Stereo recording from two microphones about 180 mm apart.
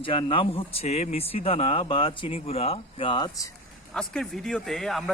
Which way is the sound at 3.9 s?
5° left (ahead or behind).